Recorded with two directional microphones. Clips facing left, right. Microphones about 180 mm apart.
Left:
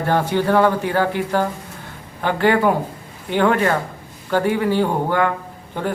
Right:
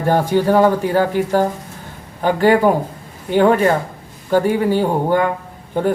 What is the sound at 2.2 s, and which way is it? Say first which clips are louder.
Speech: right 4 dB; 40° right (ahead or behind).